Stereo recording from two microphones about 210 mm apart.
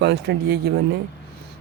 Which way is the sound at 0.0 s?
55° right (ahead or behind).